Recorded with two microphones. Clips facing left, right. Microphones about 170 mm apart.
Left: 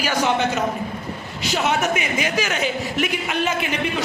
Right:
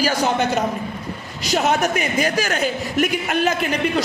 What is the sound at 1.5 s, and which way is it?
A man's voice, 40° right (ahead or behind).